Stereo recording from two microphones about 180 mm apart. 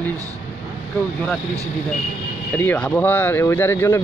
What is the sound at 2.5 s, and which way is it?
Speech, 10° left (ahead or behind).